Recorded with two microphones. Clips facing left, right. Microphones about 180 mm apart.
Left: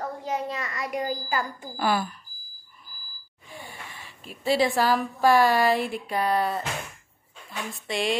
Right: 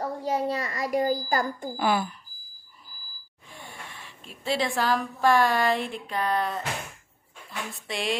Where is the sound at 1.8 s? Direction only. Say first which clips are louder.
Even; 20° right (ahead or behind).